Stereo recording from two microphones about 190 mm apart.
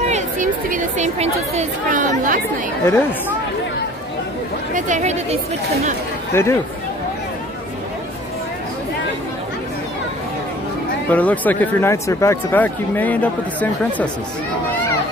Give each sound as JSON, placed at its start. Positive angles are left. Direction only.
{"t": 0.0, "sound": "speech", "side_deg": -40}
{"t": 2.8, "sound": "speech", "side_deg": 10}
{"t": 4.7, "sound": "speech", "side_deg": -40}
{"t": 6.3, "sound": "speech", "side_deg": 15}
{"t": 11.1, "sound": "speech", "side_deg": 10}